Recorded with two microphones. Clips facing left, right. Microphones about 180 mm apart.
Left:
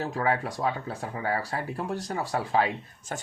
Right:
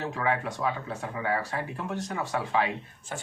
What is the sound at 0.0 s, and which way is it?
Speech, 35° left (ahead or behind).